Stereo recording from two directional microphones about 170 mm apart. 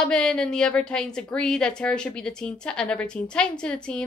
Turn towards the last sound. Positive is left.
turn(degrees=5)  # may be behind; listen again after turning